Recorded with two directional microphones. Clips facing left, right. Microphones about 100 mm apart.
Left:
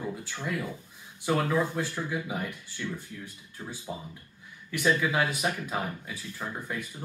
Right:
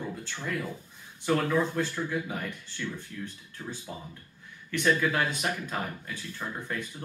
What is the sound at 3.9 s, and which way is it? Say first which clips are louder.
Speech: left 3 dB; 20° left (ahead or behind).